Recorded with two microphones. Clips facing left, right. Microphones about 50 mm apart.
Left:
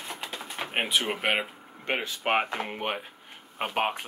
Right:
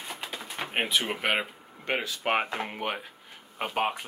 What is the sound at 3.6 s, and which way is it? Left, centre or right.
Speech, left.